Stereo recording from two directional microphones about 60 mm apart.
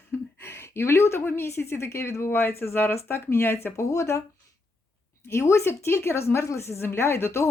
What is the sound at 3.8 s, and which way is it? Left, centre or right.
Speech, left.